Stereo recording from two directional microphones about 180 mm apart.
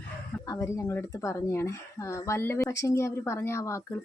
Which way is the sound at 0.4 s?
20° left (ahead or behind).